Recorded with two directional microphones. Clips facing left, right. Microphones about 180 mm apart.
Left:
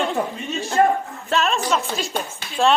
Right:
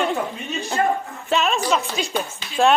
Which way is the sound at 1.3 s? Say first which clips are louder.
Right 1 dB; centre (ahead or behind).